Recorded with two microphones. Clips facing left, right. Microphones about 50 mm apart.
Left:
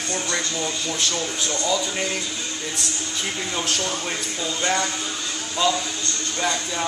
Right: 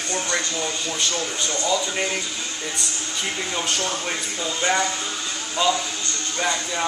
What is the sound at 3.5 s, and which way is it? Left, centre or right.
A man's voice, centre.